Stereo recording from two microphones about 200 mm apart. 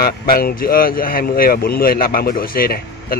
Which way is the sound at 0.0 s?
50° left (ahead or behind).